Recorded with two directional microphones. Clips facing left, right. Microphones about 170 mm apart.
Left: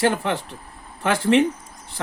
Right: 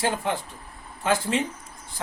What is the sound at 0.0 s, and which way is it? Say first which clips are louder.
Speech: left 5 dB; 70° left (ahead or behind).